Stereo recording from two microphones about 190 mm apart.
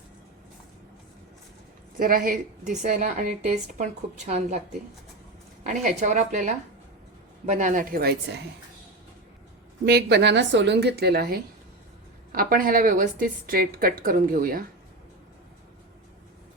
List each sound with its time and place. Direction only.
2.0 s a woman's voice: 45° right (ahead or behind)
5.6 s a woman's voice: 40° right (ahead or behind); by 8.4 s 60° right (ahead or behind)
9.8 s a woman's voice: 60° right (ahead or behind)